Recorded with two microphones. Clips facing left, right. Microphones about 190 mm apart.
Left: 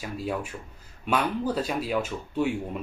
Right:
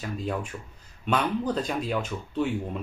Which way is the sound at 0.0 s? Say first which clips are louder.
Even; 5° left (ahead or behind).